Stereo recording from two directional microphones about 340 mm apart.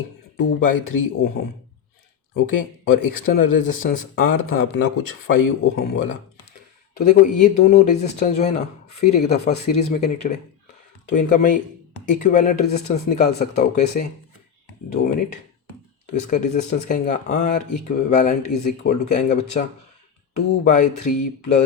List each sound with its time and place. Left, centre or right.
0.3 s speech: left
2.3 s speech: left
7.0 s speech: left